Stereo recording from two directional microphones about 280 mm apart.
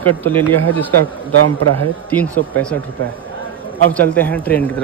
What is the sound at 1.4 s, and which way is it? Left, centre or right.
Speech, right.